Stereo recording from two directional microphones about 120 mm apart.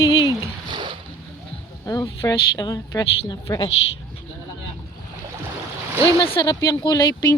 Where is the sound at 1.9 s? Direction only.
30° left (ahead or behind).